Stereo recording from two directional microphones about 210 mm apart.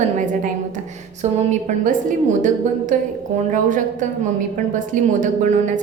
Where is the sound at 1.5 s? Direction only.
40° right (ahead or behind).